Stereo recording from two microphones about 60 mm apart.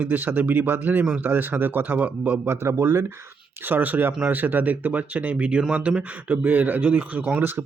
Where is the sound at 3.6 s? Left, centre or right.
Right.